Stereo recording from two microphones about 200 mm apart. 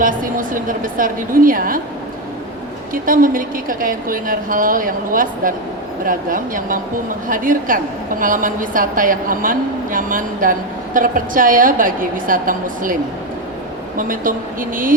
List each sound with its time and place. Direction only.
0.0 s a woman's voice: 45° right (ahead or behind)
2.9 s a woman's voice: 45° right (ahead or behind)